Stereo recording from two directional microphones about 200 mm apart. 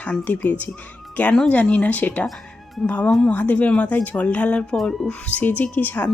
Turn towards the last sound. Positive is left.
turn(degrees=10)  # may be behind; listen again after turning